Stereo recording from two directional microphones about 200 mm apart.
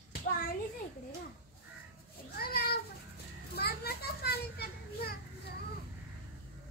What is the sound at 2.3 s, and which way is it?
Cat, 50° left (ahead or behind).